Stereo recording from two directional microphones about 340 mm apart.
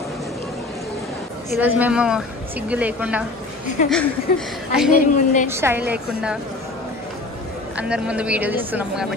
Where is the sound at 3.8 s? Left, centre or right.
Left.